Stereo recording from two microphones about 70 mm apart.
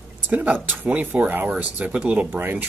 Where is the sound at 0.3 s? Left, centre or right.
Right.